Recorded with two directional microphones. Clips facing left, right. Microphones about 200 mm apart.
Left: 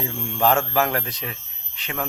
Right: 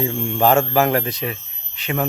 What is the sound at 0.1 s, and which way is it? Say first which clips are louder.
Mantra: right 7 dB; 20° right (ahead or behind).